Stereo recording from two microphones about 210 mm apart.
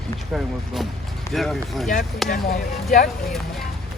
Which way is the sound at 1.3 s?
Centre (ahead or behind).